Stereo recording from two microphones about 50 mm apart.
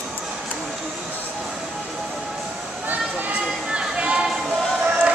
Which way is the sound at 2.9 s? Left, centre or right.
Right.